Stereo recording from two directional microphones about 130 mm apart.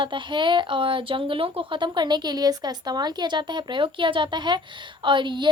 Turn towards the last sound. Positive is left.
turn(degrees=-35)  # may be behind; listen again after turning